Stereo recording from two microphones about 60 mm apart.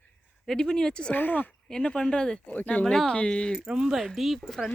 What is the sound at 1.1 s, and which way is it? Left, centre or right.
Speech, left.